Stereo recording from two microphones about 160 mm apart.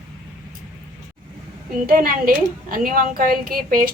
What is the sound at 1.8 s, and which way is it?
A woman's voice, 65° right (ahead or behind).